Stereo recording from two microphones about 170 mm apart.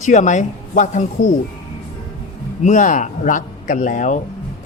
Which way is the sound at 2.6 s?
45° left (ahead or behind).